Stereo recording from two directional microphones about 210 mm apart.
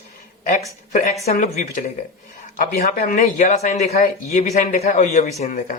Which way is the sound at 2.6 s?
40° left (ahead or behind).